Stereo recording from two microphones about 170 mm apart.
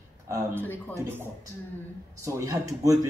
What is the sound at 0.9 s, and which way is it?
Speech, 10° right (ahead or behind).